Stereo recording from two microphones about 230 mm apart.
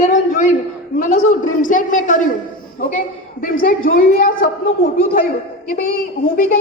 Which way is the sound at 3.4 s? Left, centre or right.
Left.